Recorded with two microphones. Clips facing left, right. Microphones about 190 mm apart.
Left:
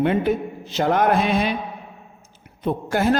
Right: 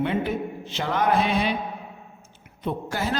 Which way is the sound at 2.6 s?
55° left (ahead or behind).